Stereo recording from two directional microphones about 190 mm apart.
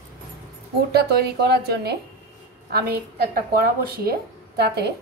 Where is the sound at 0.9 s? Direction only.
60° right (ahead or behind).